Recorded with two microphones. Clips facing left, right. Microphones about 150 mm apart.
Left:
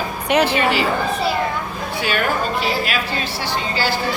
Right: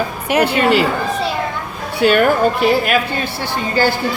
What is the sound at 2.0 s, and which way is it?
A woman's voice, 55° right (ahead or behind).